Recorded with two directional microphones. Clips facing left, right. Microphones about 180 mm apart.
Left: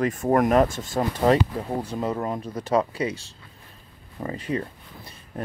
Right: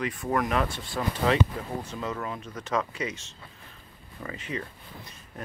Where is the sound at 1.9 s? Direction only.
35° left (ahead or behind).